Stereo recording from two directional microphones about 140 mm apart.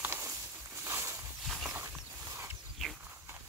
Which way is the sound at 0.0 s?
20° right (ahead or behind).